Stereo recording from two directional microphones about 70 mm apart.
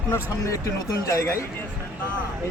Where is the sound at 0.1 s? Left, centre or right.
Left.